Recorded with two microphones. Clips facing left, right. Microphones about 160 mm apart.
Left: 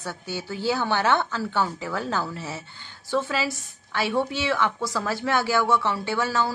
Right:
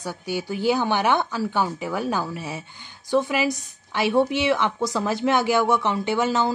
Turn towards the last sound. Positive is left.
turn(degrees=-20)  # may be behind; listen again after turning